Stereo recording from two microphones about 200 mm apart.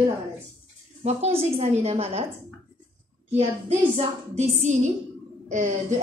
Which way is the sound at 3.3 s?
30° right (ahead or behind).